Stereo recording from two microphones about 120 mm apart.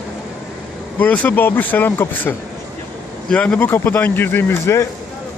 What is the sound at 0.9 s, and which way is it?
Speech, 15° left (ahead or behind).